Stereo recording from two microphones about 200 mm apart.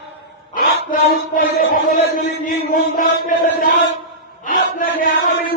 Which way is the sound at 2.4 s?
45° left (ahead or behind).